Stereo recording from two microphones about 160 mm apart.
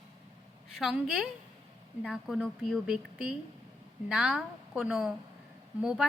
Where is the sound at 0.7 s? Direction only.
Centre (ahead or behind).